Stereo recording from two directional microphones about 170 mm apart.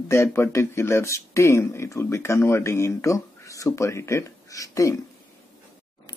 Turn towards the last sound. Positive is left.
turn(degrees=20)  # may be behind; listen again after turning